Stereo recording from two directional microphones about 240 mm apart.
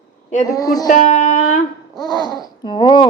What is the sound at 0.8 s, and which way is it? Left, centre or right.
Speech, left.